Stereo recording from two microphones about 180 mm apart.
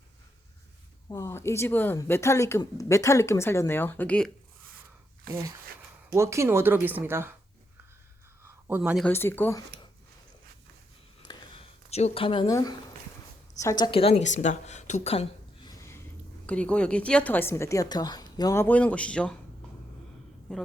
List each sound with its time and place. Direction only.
1.1 s speech: 15° left (ahead or behind)
5.3 s speech: 55° right (ahead or behind)
6.1 s speech: 15° right (ahead or behind)
8.4 s a sound: 10° right (ahead or behind)
9.0 s speech: 10° left (ahead or behind)
11.2 s a sound: 25° left (ahead or behind)
11.9 s a woman's voice: 35° left (ahead or behind)
15.7 s a sound: 15° left (ahead or behind)
16.5 s speech: 5° left (ahead or behind)
20.5 s a man's voice: 5° left (ahead or behind)